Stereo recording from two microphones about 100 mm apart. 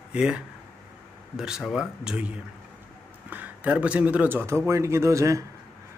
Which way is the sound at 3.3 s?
15° right (ahead or behind).